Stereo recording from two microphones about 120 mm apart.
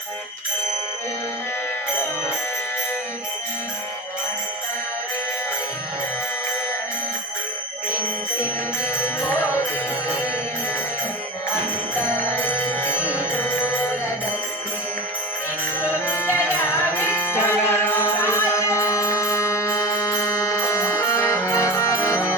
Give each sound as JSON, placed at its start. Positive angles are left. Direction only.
{"t": 9.4, "sound": "music", "side_deg": 20}
{"t": 12.1, "sound": "music", "side_deg": 15}
{"t": 15.8, "sound": "music", "side_deg": 20}